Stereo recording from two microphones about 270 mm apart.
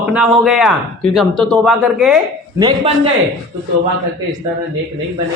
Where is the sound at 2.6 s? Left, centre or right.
Centre.